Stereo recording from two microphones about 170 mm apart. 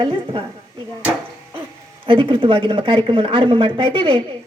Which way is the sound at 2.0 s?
30° right (ahead or behind).